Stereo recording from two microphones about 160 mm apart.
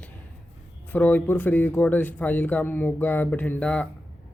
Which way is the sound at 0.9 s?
10° left (ahead or behind).